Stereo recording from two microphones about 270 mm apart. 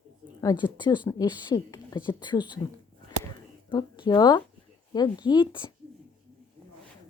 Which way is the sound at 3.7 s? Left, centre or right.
Centre.